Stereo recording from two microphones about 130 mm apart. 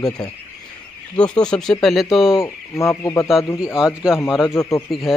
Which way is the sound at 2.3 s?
20° left (ahead or behind).